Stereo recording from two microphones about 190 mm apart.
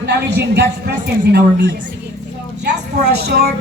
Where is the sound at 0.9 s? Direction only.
50° right (ahead or behind).